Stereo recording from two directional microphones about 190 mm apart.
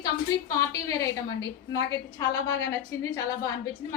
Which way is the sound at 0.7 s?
15° left (ahead or behind).